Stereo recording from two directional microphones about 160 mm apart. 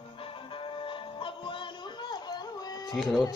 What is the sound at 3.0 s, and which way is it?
Speech, centre (ahead or behind).